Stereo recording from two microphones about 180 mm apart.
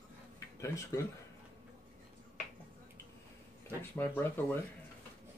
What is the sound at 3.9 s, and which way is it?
Speech, 10° left (ahead or behind).